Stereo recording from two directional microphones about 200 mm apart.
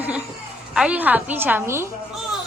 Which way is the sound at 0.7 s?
5° right (ahead or behind).